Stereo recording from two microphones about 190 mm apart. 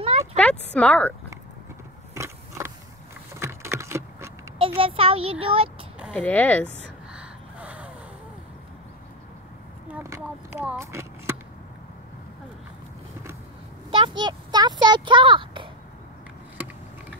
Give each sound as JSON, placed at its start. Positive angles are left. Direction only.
{"t": 0.4, "sound": "speech", "side_deg": 5}
{"t": 2.1, "sound": "biting", "side_deg": -15}
{"t": 3.3, "sound": "vehicle", "side_deg": -15}
{"t": 4.6, "sound": "a child's voice", "side_deg": -30}
{"t": 6.1, "sound": "speech", "side_deg": 10}
{"t": 7.2, "sound": "gasp", "side_deg": -5}
{"t": 10.0, "sound": "a sound", "side_deg": -15}
{"t": 13.8, "sound": "a sound", "side_deg": -25}